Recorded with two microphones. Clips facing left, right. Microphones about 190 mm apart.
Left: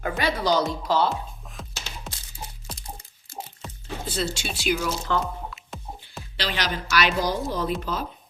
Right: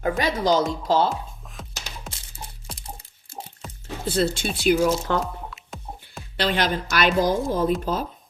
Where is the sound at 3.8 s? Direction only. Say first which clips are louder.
Right 6 dB; 60° right (ahead or behind).